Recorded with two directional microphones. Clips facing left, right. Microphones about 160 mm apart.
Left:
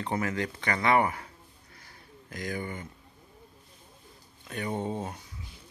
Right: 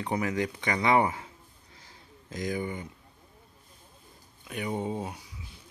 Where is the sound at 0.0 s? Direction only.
15° right (ahead or behind).